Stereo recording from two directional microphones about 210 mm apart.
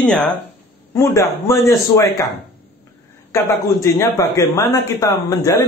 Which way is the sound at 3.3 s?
15° left (ahead or behind).